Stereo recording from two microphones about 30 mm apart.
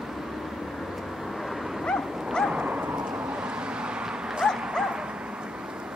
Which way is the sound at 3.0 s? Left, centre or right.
Right.